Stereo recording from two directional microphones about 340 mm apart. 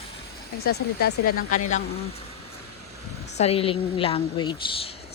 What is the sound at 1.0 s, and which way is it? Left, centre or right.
Speech, left.